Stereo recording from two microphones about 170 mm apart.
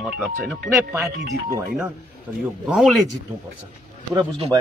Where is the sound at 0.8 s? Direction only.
15° right (ahead or behind).